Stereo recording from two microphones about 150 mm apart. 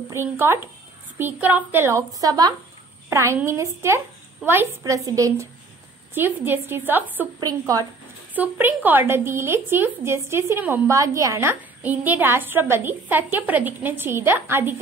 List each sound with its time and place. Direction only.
0.1 s a woman's voice: 15° right (ahead or behind)
7.3 s a woman's voice: 25° right (ahead or behind)
8.4 s speech: 10° right (ahead or behind)